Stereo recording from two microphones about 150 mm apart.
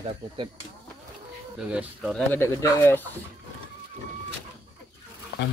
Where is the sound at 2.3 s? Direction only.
20° left (ahead or behind).